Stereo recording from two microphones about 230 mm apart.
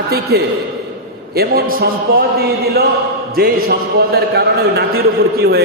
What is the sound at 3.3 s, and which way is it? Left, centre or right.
A man's voice, right.